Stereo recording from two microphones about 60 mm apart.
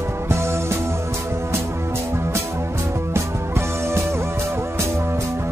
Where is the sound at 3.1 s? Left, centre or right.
Right.